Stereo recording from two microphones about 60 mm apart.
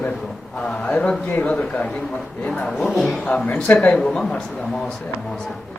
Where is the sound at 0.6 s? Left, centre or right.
Centre.